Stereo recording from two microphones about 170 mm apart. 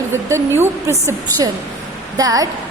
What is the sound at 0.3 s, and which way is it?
A woman's voice, 15° right (ahead or behind).